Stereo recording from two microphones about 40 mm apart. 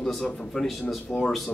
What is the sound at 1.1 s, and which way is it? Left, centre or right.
Speech, left.